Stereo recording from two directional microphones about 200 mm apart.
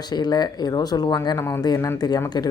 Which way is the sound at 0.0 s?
20° left (ahead or behind).